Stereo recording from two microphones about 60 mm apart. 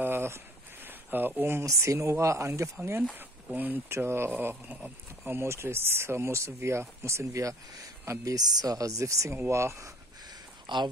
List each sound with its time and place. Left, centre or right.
0.0 s a sound: right
1.6 s speech: right
3.5 s speech: right
3.9 s speech: right
4.6 s speech: right
5.2 s speech: right
8.4 s speech: right